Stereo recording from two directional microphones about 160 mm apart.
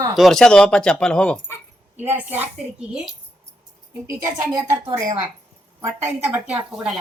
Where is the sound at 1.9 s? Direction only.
10° right (ahead or behind).